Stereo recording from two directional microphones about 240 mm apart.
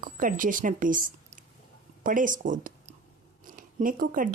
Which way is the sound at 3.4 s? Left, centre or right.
Right.